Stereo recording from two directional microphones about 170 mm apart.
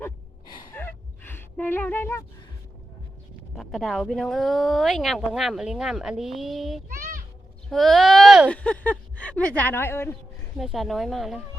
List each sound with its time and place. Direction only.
0.4 s gasp: 25° left (ahead or behind)
0.7 s gasp: 10° left (ahead or behind)
3.5 s speech: centre (ahead or behind)
6.9 s children playing: 50° right (ahead or behind)
7.7 s a woman's voice: centre (ahead or behind)
10.6 s speech: centre (ahead or behind)